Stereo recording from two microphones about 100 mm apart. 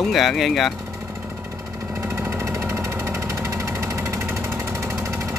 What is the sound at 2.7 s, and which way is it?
Vehicle, 25° right (ahead or behind).